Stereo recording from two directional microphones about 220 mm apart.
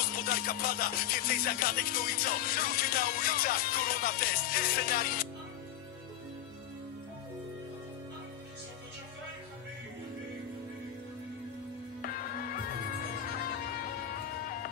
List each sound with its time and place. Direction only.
0.0 s music: 40° left (ahead or behind)
12.0 s music: 40° left (ahead or behind)